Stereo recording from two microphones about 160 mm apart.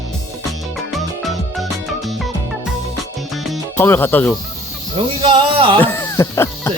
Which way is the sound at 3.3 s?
Centre (ahead or behind).